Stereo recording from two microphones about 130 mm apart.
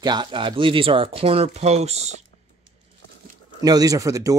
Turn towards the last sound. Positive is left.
turn(degrees=-25)  # may be behind; listen again after turning